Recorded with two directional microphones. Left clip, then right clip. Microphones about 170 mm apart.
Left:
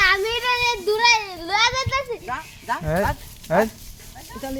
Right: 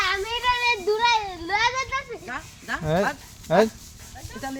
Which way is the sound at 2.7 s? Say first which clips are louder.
Left 1 dB; 20° right (ahead or behind).